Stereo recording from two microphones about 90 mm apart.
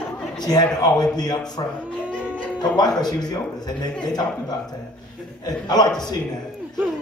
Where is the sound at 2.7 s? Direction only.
50° left (ahead or behind).